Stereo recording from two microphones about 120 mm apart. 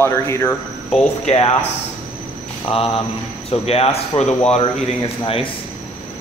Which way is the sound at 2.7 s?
55° left (ahead or behind).